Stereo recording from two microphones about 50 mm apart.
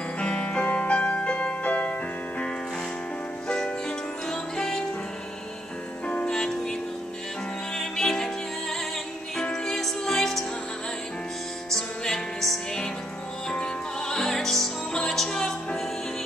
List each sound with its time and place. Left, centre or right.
0.2 s music: left
6.0 s music: left
6.3 s music: centre
11.7 s music: centre